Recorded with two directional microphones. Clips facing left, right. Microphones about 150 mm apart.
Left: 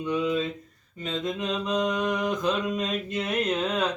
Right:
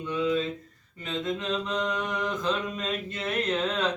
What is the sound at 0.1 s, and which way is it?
Mantra, 15° left (ahead or behind).